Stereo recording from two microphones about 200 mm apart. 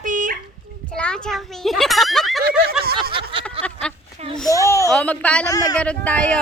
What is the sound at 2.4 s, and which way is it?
Snicker, 50° right (ahead or behind).